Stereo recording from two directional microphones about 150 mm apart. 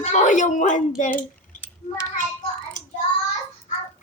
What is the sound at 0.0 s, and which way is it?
Speech, 50° left (ahead or behind).